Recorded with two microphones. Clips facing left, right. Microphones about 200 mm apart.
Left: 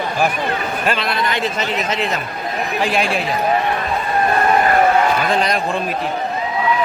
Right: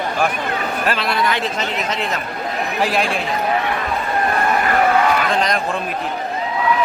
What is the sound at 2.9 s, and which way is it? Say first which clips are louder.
Speech: left 3 dB; centre (ahead or behind).